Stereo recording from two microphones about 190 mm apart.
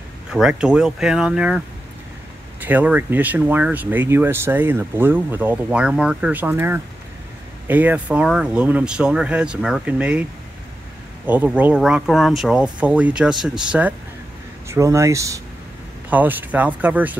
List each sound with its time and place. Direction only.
0.3 s speech: 5° right (ahead or behind)
2.6 s speech: 10° right (ahead or behind)
11.2 s speech: 10° right (ahead or behind)